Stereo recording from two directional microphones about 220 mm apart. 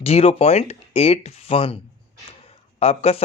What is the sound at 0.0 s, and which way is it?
Speech, 25° left (ahead or behind).